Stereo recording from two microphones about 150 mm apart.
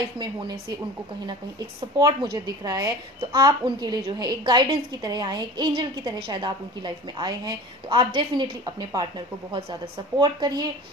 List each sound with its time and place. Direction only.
0.2 s a woman's voice: 30° right (ahead or behind)
2.0 s a woman's voice: 25° right (ahead or behind)